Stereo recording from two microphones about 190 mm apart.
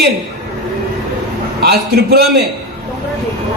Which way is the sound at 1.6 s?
55° right (ahead or behind).